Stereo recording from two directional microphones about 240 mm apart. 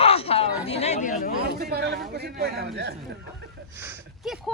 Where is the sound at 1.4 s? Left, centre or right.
Right.